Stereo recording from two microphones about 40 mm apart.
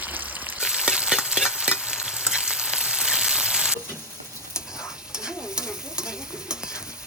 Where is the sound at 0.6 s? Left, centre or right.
Centre.